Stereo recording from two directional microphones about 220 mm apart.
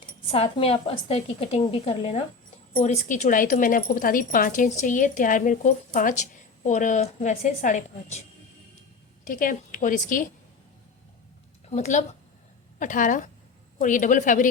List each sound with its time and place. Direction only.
0.3 s a woman's voice: 25° left (ahead or behind)
9.2 s speech: 40° left (ahead or behind)
11.7 s speech: 30° left (ahead or behind)